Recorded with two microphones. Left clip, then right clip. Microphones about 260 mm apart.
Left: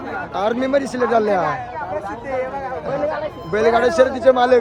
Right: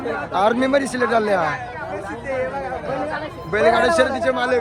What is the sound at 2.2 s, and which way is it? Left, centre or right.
Speech, left.